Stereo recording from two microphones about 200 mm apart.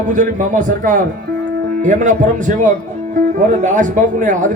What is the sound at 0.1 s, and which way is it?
Speech, 40° right (ahead or behind).